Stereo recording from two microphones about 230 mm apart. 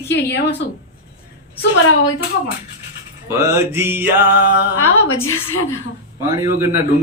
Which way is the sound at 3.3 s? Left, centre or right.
Centre.